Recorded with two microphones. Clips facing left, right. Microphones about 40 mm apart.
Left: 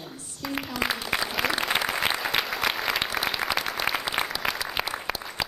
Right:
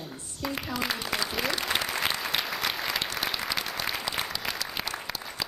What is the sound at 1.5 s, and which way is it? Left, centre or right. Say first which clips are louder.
Applause: left 5 dB; centre.